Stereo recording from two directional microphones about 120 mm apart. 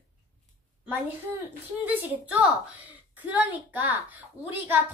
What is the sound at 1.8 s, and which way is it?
A woman's voice, 15° right (ahead or behind).